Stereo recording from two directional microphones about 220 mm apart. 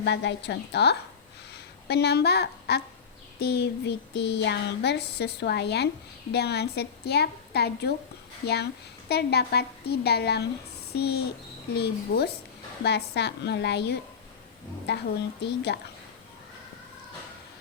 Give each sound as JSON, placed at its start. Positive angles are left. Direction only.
{"t": 0.0, "sound": "child singing", "side_deg": 50}